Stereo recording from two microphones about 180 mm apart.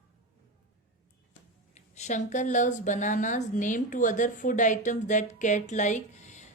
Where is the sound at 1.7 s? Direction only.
40° left (ahead or behind).